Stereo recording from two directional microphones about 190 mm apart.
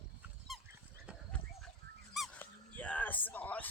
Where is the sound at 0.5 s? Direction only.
Centre (ahead or behind).